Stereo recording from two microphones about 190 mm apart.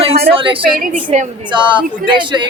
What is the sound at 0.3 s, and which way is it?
A woman's voice, 30° right (ahead or behind).